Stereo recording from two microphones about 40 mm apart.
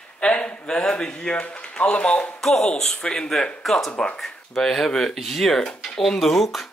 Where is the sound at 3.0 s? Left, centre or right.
Left.